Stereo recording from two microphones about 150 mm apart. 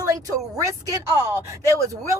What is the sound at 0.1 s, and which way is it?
A woman's voice, 20° right (ahead or behind).